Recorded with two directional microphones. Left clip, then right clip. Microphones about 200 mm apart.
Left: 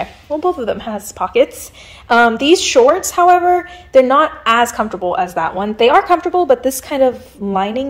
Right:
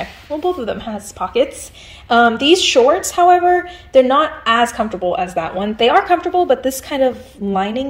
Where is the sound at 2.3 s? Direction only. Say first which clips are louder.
Even; 45° left (ahead or behind).